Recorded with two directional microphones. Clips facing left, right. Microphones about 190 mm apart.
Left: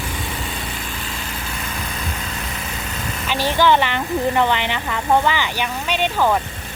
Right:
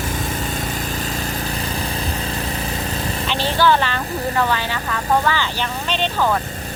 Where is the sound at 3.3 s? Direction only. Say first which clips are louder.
Left 1 dB; 15° left (ahead or behind).